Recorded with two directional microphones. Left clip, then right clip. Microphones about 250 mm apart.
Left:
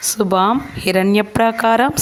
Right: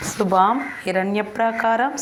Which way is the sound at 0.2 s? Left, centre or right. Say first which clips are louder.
Left 1 dB; left.